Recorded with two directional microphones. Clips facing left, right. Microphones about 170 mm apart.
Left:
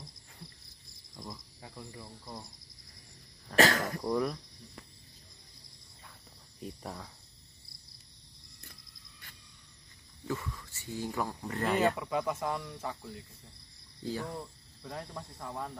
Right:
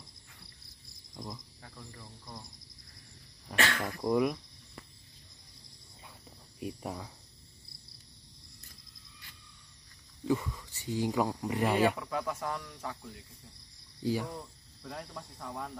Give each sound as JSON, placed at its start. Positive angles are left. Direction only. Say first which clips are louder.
{"t": 1.1, "sound": "cricket", "louder": "right 2 dB", "side_deg": -20}
{"t": 1.6, "sound": "speech", "louder": "left 4 dB", "side_deg": 10}
{"t": 3.5, "sound": "speech", "louder": "left 6 dB", "side_deg": 40}
{"t": 4.0, "sound": "speech", "louder": "right 5 dB", "side_deg": -10}
{"t": 6.6, "sound": "speech", "louder": "right 4 dB", "side_deg": -15}
{"t": 10.2, "sound": "speech", "louder": "right 6 dB", "side_deg": -15}
{"t": 12.0, "sound": "speech", "louder": "left 2 dB", "side_deg": 5}
{"t": 14.0, "sound": "speech", "louder": "right 4 dB", "side_deg": -10}
{"t": 14.3, "sound": "speech", "louder": "left 2 dB", "side_deg": 5}